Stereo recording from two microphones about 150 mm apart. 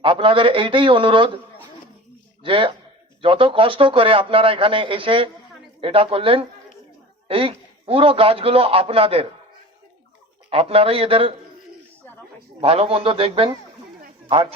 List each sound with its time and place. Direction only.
0.0 s a man's voice: 35° right (ahead or behind)
2.4 s a man's voice: 35° right (ahead or behind)
10.5 s a man's voice: 40° right (ahead or behind)
12.5 s a man's voice: 40° right (ahead or behind)